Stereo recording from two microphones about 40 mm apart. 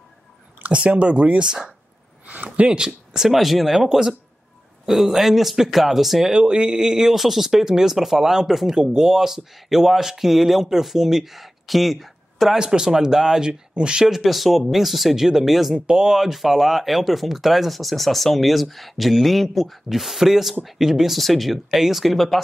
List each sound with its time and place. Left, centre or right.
0.6 s speech: right
2.2 s a sound: right
2.7 s speech: centre
6.3 s speech: right; by 12.5 s centre
12.5 s speech: centre
14.0 s speech: centre